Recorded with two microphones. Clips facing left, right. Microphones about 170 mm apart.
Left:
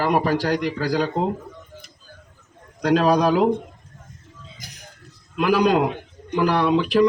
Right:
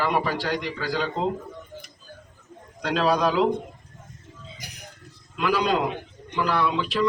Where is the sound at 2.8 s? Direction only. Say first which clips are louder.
Left 5 dB; 45° left (ahead or behind).